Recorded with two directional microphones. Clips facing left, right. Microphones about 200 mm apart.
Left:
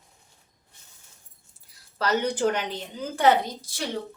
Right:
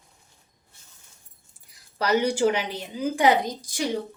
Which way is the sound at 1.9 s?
10° right (ahead or behind).